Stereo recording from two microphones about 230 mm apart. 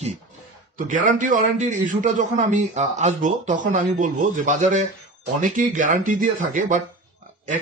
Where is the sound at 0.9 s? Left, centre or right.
Right.